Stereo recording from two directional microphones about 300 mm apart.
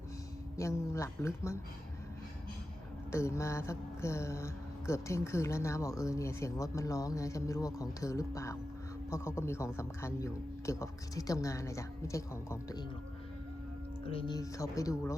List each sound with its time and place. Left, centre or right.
0.5 s speech: centre
3.1 s speech: centre
14.0 s speech: centre